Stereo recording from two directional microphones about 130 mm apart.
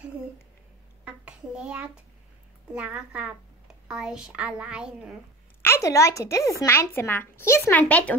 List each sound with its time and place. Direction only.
1.0 s a sound: 10° right (ahead or behind)
2.7 s a woman's voice: 10° right (ahead or behind)
5.6 s speech: 20° left (ahead or behind)